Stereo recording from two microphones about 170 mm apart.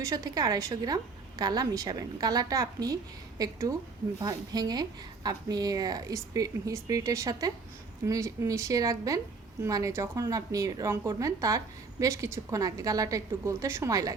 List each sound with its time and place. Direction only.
0.0 s a woman's voice: 20° right (ahead or behind)